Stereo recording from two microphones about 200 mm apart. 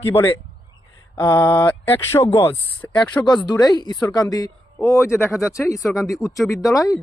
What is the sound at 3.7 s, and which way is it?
Speech, 20° left (ahead or behind).